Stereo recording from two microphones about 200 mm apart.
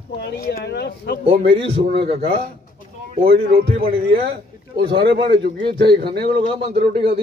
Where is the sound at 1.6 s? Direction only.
30° right (ahead or behind).